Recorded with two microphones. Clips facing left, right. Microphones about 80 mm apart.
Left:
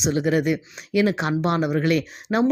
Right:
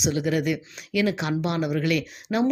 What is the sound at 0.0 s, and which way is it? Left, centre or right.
Speech, left.